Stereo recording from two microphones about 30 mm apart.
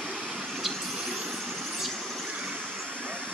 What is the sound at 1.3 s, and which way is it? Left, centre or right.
Vehicle, centre.